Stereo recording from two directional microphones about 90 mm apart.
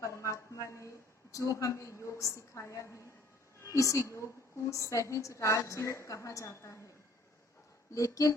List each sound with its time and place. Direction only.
0.0 s a sound: 35° left (ahead or behind)
3.6 s a woman's voice: 35° left (ahead or behind)
7.9 s a woman's voice: 40° left (ahead or behind)